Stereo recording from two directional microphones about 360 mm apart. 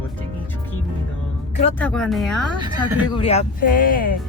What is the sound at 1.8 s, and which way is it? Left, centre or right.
Speech, centre.